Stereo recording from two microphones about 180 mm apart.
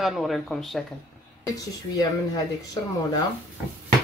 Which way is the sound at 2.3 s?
20° left (ahead or behind).